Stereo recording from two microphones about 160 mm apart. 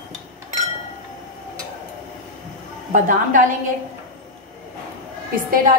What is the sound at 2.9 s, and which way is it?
Speech, 55° right (ahead or behind).